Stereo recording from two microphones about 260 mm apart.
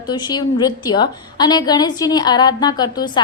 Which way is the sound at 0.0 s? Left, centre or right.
Centre.